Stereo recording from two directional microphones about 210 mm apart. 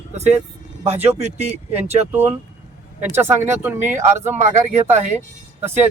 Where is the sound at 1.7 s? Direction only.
30° right (ahead or behind).